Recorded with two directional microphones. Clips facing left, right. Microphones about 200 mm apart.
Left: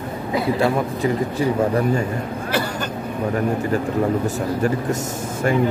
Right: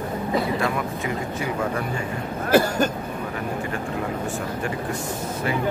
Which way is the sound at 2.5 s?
45° right (ahead or behind).